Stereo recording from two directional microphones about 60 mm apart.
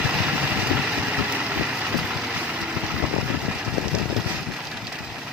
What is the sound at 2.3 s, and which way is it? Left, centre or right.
Vehicle, right.